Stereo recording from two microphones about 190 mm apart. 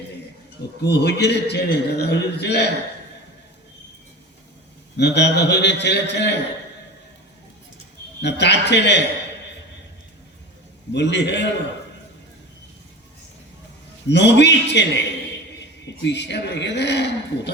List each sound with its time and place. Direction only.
0.8 s a man's voice: 60° left (ahead or behind)
4.9 s a man's voice: 65° left (ahead or behind)
8.2 s a man's voice: 65° left (ahead or behind)
10.9 s a man's voice: 65° left (ahead or behind)
14.1 s a man's voice: 65° left (ahead or behind)